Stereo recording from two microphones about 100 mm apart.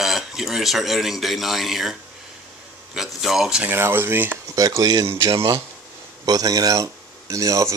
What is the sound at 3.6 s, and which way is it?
Speech, 20° right (ahead or behind).